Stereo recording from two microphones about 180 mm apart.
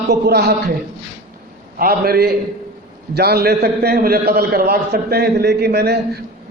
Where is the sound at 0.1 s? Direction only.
65° right (ahead or behind).